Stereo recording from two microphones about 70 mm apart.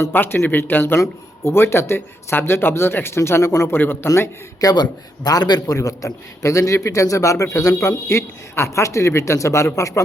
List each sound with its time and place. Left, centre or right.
0.1 s speech: left
4.6 s a man's voice: left